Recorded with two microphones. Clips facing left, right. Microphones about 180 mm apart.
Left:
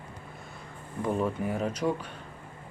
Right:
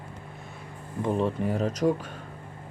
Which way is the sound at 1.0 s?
25° right (ahead or behind).